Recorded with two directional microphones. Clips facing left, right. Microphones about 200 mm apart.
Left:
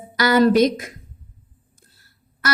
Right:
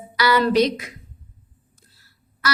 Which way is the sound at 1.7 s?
50° left (ahead or behind).